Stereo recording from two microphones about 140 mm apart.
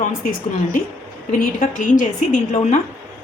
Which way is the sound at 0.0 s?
75° left (ahead or behind).